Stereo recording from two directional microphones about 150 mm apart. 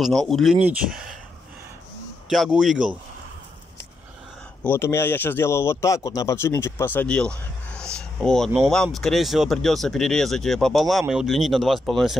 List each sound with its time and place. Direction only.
0.0 s speech: centre (ahead or behind)
2.2 s speech: centre (ahead or behind)
4.6 s speech: 15° left (ahead or behind); by 12.2 s centre (ahead or behind)